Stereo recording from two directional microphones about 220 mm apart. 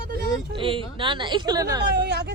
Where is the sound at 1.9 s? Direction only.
50° right (ahead or behind).